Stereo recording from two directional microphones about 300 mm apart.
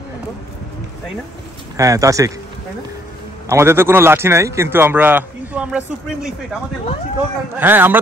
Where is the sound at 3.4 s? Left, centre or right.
Centre.